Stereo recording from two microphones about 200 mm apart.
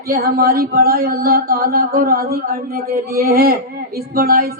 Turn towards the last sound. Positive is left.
turn(degrees=-50)  # may be behind; listen again after turning